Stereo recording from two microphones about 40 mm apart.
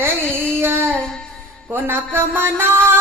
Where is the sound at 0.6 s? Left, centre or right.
Right.